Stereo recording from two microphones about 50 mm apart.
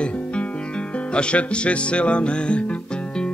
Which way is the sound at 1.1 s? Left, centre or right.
Left.